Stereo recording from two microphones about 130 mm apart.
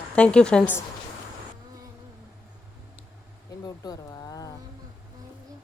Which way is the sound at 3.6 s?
30° left (ahead or behind).